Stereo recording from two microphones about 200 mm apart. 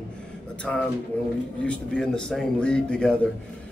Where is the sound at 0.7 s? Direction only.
Centre (ahead or behind).